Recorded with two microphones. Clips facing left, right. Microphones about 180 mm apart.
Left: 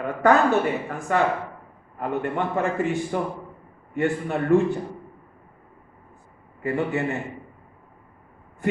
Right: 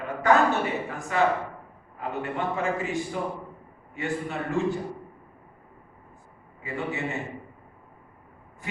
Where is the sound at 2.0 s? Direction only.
55° left (ahead or behind).